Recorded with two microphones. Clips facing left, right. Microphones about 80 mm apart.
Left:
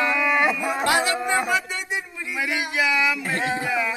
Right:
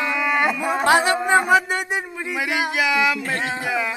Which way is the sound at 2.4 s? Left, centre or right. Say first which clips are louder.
Right 2 dB; centre.